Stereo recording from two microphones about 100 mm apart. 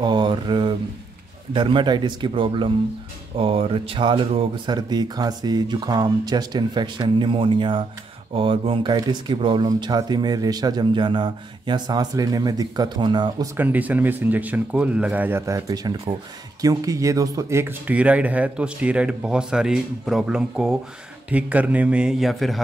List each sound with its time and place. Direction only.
0.0 s a sound: 50° right (ahead or behind)
1.5 s a man's voice: 55° right (ahead or behind)
4.6 s a man's voice: 45° right (ahead or behind); by 8.9 s 60° right (ahead or behind)
8.9 s a man's voice: 45° right (ahead or behind)
13.6 s speech: 15° right (ahead or behind); by 22.6 s centre (ahead or behind)